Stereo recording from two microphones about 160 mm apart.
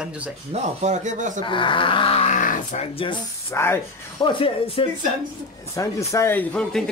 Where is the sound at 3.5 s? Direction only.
15° left (ahead or behind).